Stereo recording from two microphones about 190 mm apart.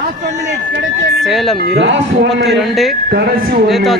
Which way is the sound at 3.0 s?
55° right (ahead or behind).